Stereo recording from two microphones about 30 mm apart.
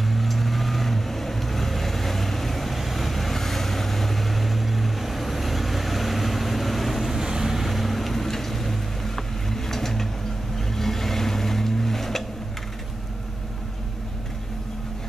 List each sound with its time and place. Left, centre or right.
0.0 s vehicle: centre
7.2 s vehicle: centre
7.6 s boat: centre
10.7 s vehicle: centre